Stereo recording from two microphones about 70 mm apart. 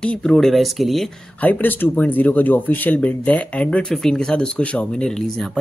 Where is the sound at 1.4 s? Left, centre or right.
Left.